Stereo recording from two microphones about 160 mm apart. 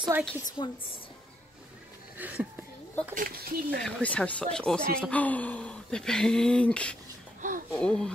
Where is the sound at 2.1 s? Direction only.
10° right (ahead or behind).